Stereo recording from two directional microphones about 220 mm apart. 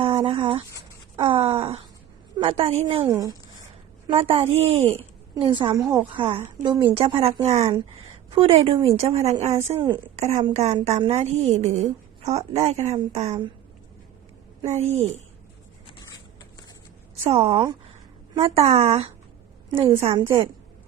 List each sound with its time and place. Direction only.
0.0 s a woman's voice: 25° right (ahead or behind)
3.0 s speech: 15° right (ahead or behind)
4.0 s a woman's voice: 25° right (ahead or behind)
5.8 s speech: 10° right (ahead or behind)
6.1 s a woman's voice: 25° right (ahead or behind)
9.7 s speech: 15° right (ahead or behind)
10.2 s a woman's voice: 35° right (ahead or behind)
14.7 s a woman's voice: 30° right (ahead or behind)
17.2 s a woman's voice: 25° right (ahead or behind)